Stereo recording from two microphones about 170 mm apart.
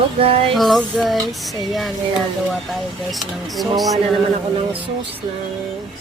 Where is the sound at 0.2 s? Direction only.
35° right (ahead or behind).